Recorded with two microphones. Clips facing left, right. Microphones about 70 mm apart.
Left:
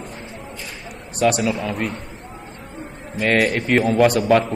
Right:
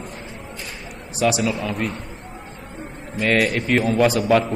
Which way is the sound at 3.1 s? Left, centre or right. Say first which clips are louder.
Left 1 dB; centre.